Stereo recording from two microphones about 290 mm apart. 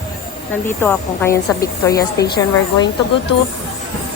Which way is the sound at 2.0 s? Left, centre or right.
Left.